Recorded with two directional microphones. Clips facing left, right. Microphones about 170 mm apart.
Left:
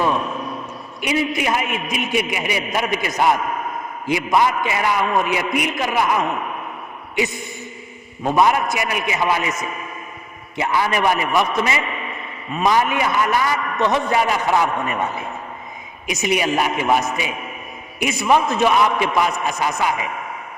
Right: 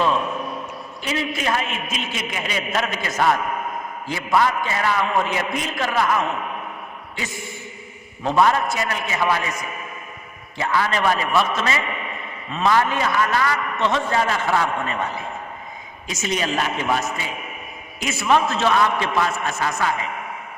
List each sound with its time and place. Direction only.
1.0 s a man's voice: 15° left (ahead or behind)
8.2 s a man's voice: 15° left (ahead or behind)